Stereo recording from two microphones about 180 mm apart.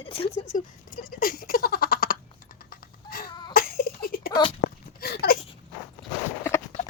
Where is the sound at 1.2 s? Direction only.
50° left (ahead or behind).